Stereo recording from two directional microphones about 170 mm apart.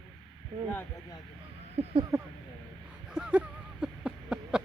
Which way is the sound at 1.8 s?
40° right (ahead or behind).